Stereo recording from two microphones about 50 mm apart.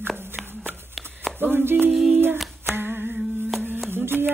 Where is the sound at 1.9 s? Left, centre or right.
Centre.